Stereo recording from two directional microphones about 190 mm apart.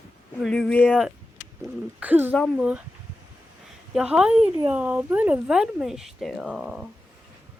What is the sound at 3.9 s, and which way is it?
Speech, 5° right (ahead or behind).